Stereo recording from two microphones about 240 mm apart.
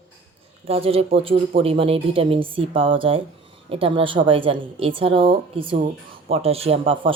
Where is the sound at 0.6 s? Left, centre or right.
Right.